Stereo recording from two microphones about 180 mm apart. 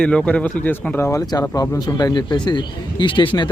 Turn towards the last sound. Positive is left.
turn(degrees=25)  # may be behind; listen again after turning